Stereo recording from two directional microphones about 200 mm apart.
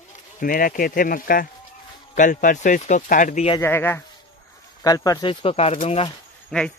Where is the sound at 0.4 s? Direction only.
45° left (ahead or behind).